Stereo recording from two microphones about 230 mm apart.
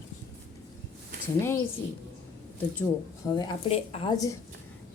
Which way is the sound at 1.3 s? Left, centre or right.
Centre.